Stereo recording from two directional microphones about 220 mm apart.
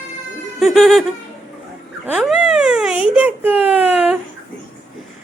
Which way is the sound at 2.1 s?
Centre (ahead or behind).